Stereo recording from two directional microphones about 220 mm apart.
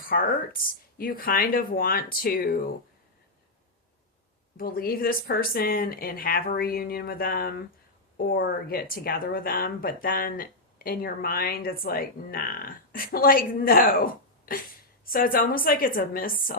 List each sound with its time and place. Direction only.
0.0 s speech: 40° left (ahead or behind)
4.5 s speech: 40° left (ahead or behind)